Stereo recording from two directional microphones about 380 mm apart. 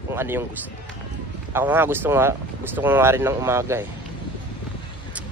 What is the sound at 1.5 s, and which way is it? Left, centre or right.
Speech, centre.